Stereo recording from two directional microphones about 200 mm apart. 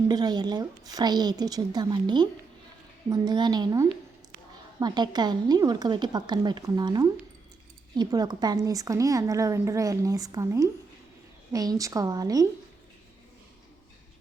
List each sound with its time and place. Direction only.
0.1 s a woman's voice: 20° right (ahead or behind)